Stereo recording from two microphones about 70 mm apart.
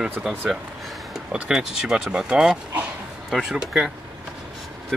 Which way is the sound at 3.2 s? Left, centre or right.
Centre.